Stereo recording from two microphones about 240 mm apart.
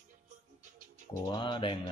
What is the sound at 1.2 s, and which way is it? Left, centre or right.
Speech, centre.